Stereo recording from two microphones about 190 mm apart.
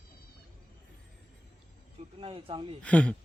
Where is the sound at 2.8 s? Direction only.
5° left (ahead or behind).